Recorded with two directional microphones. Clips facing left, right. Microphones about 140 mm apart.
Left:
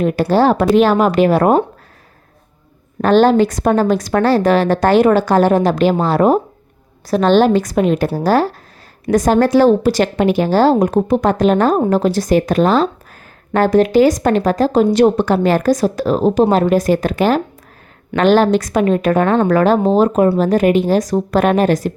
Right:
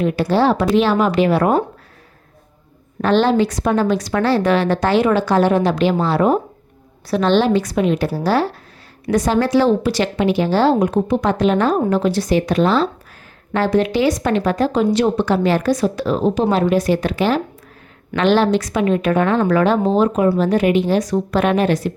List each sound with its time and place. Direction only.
0.0 s speech: 45° left (ahead or behind)
3.0 s speech: 45° left (ahead or behind)